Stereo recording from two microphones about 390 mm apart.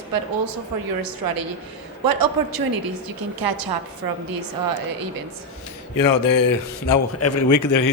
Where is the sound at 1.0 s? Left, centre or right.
Right.